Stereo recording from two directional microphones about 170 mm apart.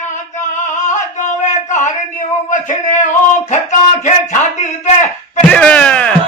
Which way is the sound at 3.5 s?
45° left (ahead or behind).